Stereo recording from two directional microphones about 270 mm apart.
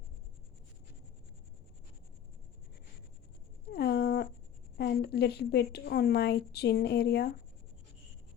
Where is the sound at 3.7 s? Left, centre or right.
Left.